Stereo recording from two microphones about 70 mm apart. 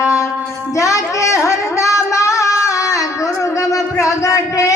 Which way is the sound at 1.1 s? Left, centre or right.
Left.